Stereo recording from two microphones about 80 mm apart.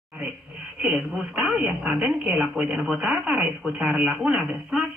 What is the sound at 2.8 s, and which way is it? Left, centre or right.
Speech, right.